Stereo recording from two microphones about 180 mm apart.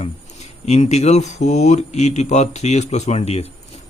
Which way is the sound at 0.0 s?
40° left (ahead or behind).